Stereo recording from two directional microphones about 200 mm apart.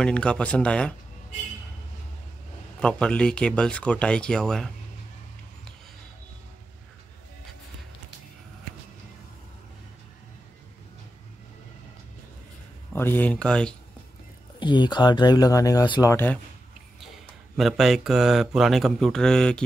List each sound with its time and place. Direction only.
0.0 s speech: 5° left (ahead or behind)
2.8 s speech: 5° left (ahead or behind)
12.9 s speech: 10° left (ahead or behind)
14.6 s speech: 20° left (ahead or behind)
17.6 s speech: centre (ahead or behind)